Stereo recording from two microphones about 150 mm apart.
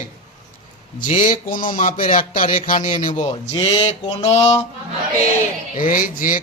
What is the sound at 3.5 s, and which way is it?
Mantra, 40° left (ahead or behind).